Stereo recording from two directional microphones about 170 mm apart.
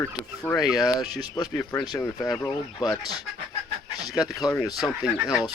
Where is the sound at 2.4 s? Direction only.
20° left (ahead or behind).